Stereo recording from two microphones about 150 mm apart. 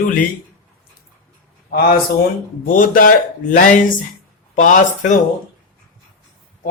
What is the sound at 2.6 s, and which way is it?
Speech, 65° left (ahead or behind).